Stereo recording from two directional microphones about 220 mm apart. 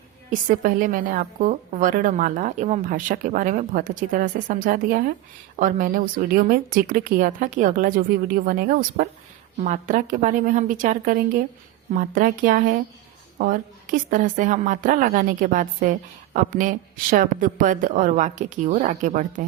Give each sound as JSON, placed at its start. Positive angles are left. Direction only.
{"t": 0.3, "sound": "a woman's voice", "side_deg": -40}